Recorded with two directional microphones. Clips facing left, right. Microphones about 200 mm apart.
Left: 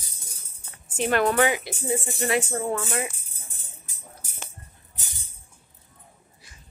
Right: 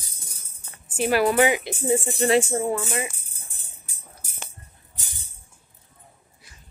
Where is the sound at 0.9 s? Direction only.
10° right (ahead or behind).